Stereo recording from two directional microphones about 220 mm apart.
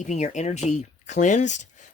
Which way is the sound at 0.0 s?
30° left (ahead or behind).